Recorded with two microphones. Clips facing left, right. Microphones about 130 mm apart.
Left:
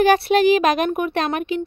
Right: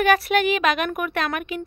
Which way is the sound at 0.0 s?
35° left (ahead or behind).